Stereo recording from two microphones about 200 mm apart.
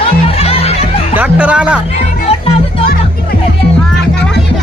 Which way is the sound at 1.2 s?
5° right (ahead or behind).